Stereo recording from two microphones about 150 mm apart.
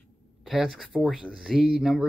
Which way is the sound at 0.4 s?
Centre (ahead or behind).